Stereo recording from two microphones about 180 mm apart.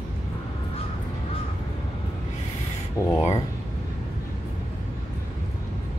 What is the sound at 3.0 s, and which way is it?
Speech, 15° left (ahead or behind).